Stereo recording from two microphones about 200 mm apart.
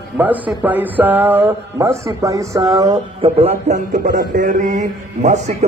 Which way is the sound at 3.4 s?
35° right (ahead or behind).